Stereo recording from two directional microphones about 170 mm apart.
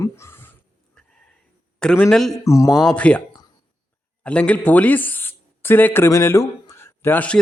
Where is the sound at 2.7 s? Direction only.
Centre (ahead or behind).